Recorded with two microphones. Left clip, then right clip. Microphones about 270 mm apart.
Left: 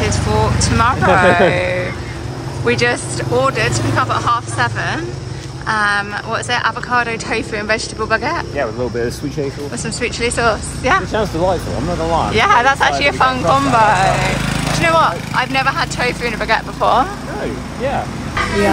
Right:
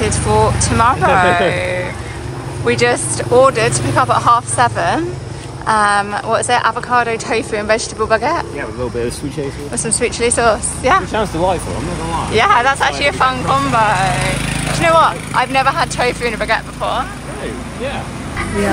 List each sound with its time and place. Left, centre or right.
0.0 s a woman's voice: centre
9.8 s a woman's voice: centre
12.4 s speech: centre
14.4 s lawn mower: left
14.8 s speech: centre